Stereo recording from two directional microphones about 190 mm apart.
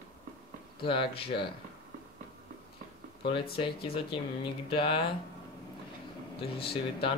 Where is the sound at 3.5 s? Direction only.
30° left (ahead or behind).